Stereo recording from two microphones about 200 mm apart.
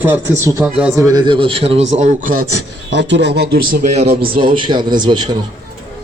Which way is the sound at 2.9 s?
60° right (ahead or behind).